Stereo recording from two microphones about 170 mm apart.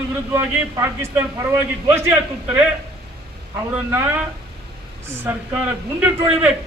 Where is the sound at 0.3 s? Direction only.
15° right (ahead or behind).